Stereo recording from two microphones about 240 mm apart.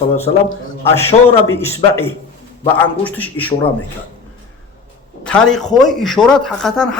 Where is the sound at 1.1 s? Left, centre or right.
Left.